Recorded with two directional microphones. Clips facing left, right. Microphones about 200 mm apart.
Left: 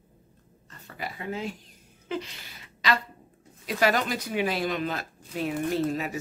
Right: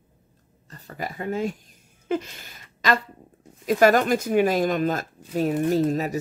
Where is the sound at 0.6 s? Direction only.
40° right (ahead or behind).